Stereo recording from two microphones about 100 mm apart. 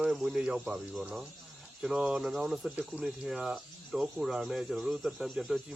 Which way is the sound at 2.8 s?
15° right (ahead or behind).